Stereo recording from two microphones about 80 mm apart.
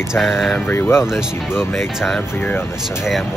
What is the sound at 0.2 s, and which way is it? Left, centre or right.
Speech, centre.